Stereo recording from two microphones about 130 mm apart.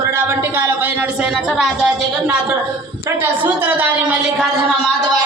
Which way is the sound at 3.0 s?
15° right (ahead or behind).